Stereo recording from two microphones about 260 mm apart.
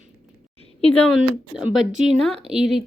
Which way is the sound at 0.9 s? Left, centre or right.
Centre.